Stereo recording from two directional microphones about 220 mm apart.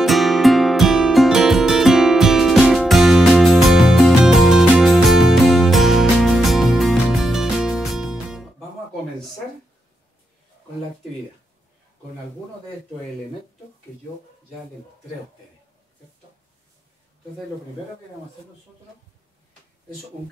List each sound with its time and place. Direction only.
0.0 s music: centre (ahead or behind)